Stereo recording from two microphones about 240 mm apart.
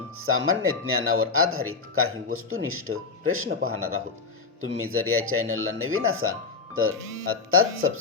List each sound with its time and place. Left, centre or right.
0.2 s speech: right